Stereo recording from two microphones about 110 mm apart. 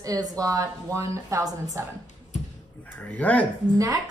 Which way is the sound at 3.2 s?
10° left (ahead or behind).